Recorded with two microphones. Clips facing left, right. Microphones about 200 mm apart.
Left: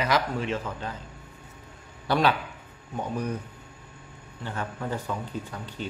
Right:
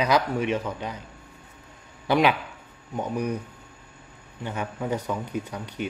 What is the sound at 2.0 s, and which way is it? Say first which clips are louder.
Speech: right 3 dB; 15° right (ahead or behind).